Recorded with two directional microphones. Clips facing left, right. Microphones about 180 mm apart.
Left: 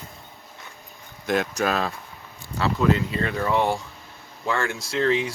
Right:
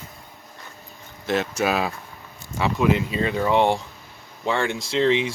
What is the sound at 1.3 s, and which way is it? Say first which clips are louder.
Speech: right 1 dB; 5° right (ahead or behind).